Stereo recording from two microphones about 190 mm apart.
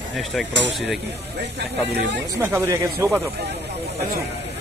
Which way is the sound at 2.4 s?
10° right (ahead or behind).